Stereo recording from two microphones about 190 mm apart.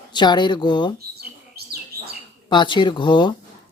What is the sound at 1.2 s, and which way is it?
Bird, 55° right (ahead or behind).